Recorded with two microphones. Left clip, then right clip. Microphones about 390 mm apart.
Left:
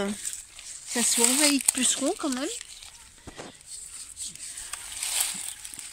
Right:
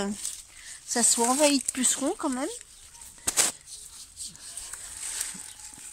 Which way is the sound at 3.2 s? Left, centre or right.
Right.